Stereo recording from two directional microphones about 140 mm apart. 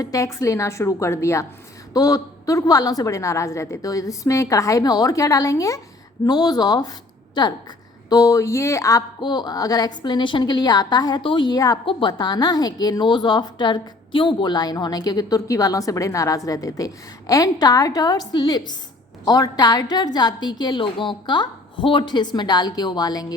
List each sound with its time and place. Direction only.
0.0 s a woman's voice: 25° left (ahead or behind)